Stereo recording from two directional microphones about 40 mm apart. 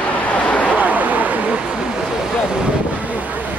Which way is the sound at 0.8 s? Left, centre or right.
Right.